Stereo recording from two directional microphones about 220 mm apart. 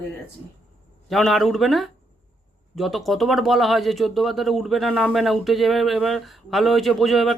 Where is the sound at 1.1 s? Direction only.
Centre (ahead or behind).